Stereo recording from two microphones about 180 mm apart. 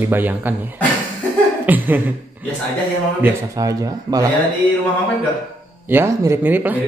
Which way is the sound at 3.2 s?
20° right (ahead or behind).